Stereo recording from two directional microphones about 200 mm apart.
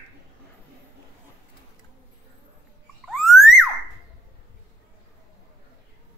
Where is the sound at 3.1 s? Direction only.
Centre (ahead or behind).